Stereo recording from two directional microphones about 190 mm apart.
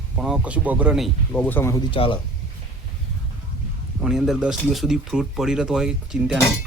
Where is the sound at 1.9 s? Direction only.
25° left (ahead or behind).